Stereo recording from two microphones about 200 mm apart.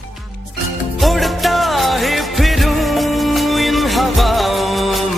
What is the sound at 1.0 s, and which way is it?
Music, centre (ahead or behind).